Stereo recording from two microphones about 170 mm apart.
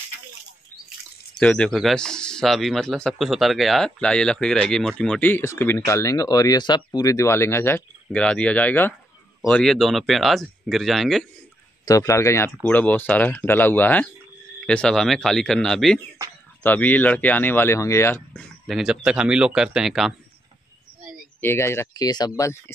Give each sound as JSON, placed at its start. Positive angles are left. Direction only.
{"t": 1.4, "sound": "speech", "side_deg": 5}
{"t": 11.8, "sound": "speech", "side_deg": 20}
{"t": 21.4, "sound": "speech", "side_deg": 15}